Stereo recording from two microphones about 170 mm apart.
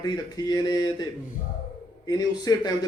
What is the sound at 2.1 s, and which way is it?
Speech, 20° left (ahead or behind).